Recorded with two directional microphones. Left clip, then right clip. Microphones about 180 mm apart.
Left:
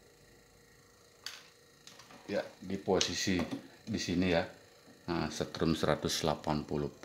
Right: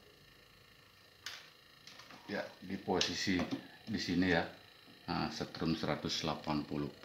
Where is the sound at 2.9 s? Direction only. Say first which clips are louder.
Left 3 dB; 50° left (ahead or behind).